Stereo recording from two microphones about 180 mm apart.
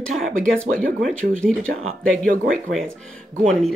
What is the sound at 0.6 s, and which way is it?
Speech, 50° right (ahead or behind).